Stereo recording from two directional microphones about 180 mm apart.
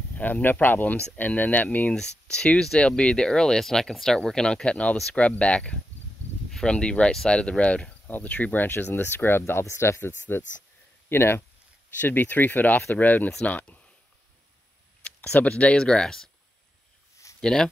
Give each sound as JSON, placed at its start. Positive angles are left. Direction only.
{"t": 0.1, "sound": "speech", "side_deg": 10}
{"t": 15.0, "sound": "speech", "side_deg": 5}
{"t": 17.4, "sound": "speech", "side_deg": 5}